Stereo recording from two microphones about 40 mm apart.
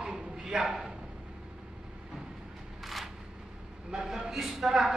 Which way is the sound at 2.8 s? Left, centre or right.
Centre.